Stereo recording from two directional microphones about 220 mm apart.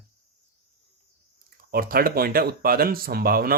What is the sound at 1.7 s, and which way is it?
Speech, 40° right (ahead or behind).